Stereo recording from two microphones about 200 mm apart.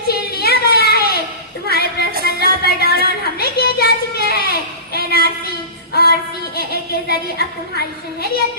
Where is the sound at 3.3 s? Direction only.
50° left (ahead or behind).